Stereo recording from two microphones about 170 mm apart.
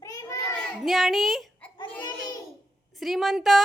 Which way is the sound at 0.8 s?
Centre (ahead or behind).